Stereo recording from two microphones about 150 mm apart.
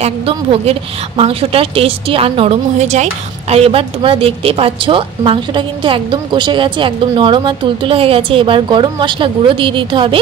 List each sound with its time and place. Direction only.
0.0 s a woman's voice: 40° right (ahead or behind)